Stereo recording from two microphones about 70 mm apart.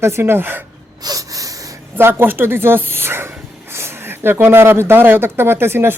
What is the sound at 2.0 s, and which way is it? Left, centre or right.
Speech, right.